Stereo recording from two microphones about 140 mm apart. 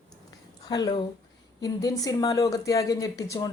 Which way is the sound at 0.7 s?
30° left (ahead or behind).